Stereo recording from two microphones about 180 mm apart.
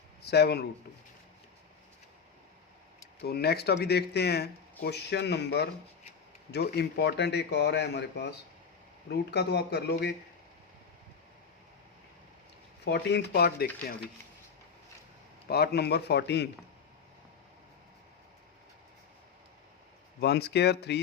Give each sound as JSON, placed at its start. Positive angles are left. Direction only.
{"t": 0.3, "sound": "speech", "side_deg": 65}
{"t": 3.2, "sound": "speech", "side_deg": 60}
{"t": 12.8, "sound": "speech", "side_deg": 70}
{"t": 15.4, "sound": "speech", "side_deg": 65}
{"t": 20.2, "sound": "speech", "side_deg": 70}